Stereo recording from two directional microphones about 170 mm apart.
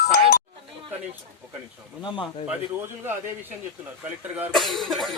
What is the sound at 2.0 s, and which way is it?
Speech, 30° left (ahead or behind).